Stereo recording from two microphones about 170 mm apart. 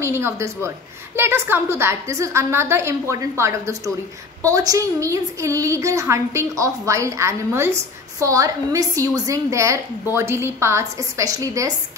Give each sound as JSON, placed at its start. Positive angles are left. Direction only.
{"t": 0.0, "sound": "a woman's voice", "side_deg": -15}